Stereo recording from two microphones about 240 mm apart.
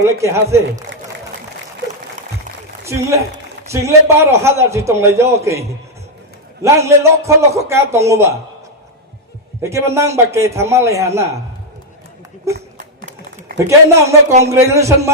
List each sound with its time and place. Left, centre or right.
0.0 s a man's voice: centre
2.8 s a man's voice: centre
9.6 s a man's voice: centre
12.5 s run: right
13.7 s a man's voice: centre